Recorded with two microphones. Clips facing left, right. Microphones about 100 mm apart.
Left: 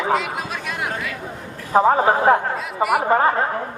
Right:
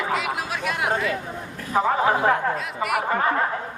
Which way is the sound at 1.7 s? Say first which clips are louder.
Left 5 dB; 35° left (ahead or behind).